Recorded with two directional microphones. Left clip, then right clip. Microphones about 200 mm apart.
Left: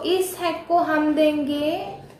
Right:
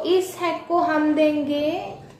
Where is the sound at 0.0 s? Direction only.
15° left (ahead or behind).